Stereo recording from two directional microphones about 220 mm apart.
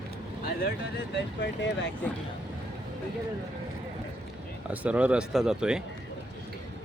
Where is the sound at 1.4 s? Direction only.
50° left (ahead or behind).